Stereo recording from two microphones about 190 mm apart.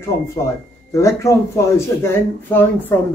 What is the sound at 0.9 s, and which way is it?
Speech, 15° left (ahead or behind).